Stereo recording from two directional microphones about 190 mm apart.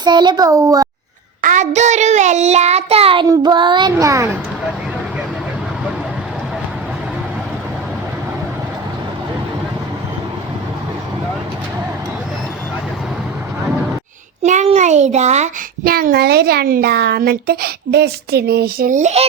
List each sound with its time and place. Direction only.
0.0 s a child's voice: 25° right (ahead or behind)
1.4 s child singing: 40° right (ahead or behind)
3.2 s a child's voice: 25° right (ahead or behind)
14.4 s child singing: 35° right (ahead or behind)
15.8 s a child's voice: 50° right (ahead or behind)